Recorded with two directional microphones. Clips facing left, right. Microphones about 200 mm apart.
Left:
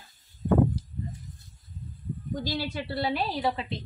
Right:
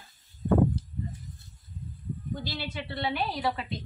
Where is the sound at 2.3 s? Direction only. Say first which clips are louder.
Left 8 dB; 40° left (ahead or behind).